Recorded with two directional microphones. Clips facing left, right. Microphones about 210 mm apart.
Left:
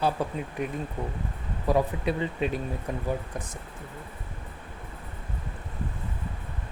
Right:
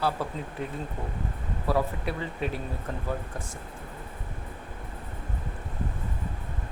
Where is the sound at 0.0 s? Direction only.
15° left (ahead or behind).